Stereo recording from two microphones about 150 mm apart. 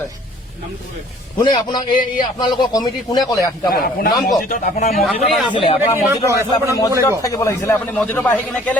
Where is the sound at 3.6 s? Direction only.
75° left (ahead or behind).